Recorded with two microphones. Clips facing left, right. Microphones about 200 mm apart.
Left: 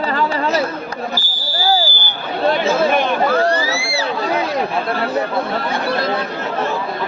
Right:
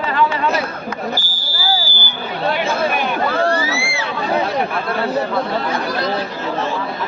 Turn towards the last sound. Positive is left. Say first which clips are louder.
# left 1 dB
turn(degrees=25)  # may be behind; listen again after turning